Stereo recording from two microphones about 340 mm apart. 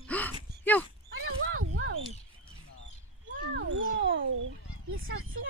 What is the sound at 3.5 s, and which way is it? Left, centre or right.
Cat, right.